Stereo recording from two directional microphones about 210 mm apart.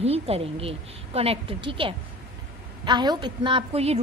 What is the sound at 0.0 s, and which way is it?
A woman's voice, 30° right (ahead or behind).